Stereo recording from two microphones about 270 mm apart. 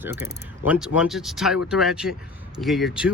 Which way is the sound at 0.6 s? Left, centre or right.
Centre.